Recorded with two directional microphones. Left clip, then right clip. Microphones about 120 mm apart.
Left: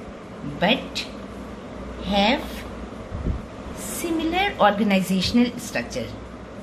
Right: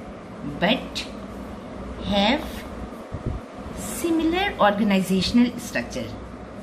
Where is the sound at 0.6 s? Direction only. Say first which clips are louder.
Left 1 dB; 45° left (ahead or behind).